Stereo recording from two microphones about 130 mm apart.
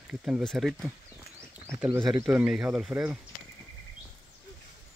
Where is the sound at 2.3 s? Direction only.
10° right (ahead or behind).